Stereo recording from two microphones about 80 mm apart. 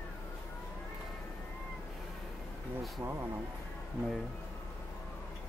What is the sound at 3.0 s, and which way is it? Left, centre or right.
Speech, right.